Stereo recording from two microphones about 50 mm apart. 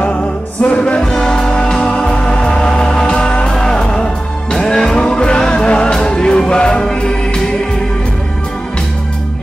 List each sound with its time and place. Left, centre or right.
0.0 s music: left